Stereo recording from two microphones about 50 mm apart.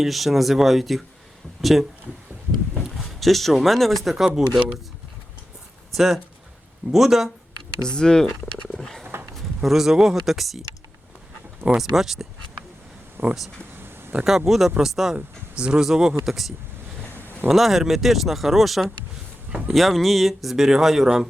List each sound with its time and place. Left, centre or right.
0.0 s speech: centre
6.9 s speech: centre
7.9 s speech: centre
8.8 s roaring cats: centre
9.3 s speech: centre
11.6 s speech: centre
13.2 s speech: right
13.7 s a sound: right
14.3 s speech: centre
15.1 s speech: centre